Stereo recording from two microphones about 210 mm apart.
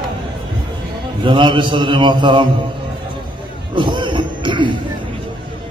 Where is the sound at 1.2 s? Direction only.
20° right (ahead or behind).